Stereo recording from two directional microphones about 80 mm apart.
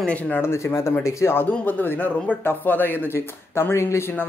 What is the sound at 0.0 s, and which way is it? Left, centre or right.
Speech, centre.